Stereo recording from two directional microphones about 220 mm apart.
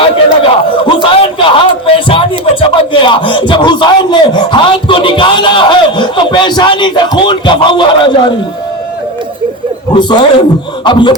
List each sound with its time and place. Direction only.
0.9 s speech: 25° left (ahead or behind)
9.9 s a man's voice: 20° left (ahead or behind)